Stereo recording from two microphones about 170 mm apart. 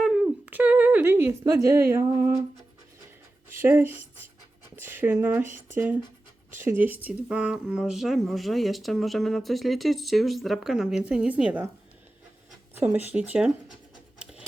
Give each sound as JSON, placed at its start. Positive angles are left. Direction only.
{"t": 0.0, "sound": "humming", "side_deg": 0}
{"t": 0.3, "sound": "a sound", "side_deg": -10}
{"t": 1.9, "sound": "speech", "side_deg": -15}
{"t": 3.5, "sound": "speech", "side_deg": -10}
{"t": 12.7, "sound": "speech", "side_deg": -10}
{"t": 14.2, "sound": "sewing machine", "side_deg": -5}